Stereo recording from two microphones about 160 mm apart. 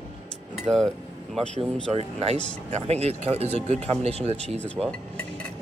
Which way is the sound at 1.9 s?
40° right (ahead or behind).